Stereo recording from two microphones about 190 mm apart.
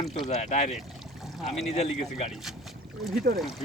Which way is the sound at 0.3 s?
40° left (ahead or behind).